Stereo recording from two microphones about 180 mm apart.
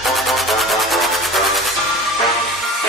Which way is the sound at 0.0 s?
Centre (ahead or behind).